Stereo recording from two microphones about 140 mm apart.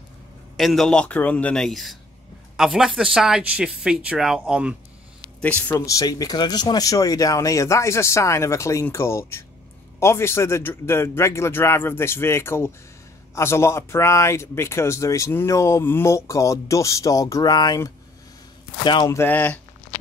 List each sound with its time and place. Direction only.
0.6 s speech: centre (ahead or behind)
5.4 s speech: 10° left (ahead or behind)
5.9 s a man's voice: 25° left (ahead or behind)
19.0 s speech: 15° left (ahead or behind)